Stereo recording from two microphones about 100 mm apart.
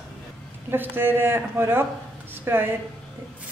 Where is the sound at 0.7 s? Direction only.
20° right (ahead or behind).